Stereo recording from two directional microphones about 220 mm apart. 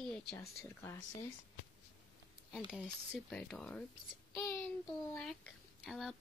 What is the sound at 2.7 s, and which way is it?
Speech, centre (ahead or behind).